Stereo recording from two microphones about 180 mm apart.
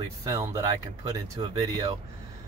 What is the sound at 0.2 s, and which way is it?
Speech, 20° right (ahead or behind).